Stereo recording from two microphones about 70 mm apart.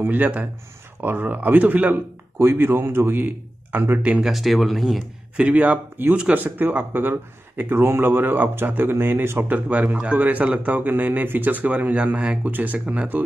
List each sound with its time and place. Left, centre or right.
0.0 s a man's voice: right
4.0 s speech: centre
4.3 s speech: centre
5.4 s speech: right
9.7 s speech: centre
12.4 s speech: right
12.7 s speech: centre